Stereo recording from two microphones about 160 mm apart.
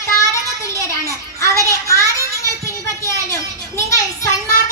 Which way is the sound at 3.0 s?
20° left (ahead or behind).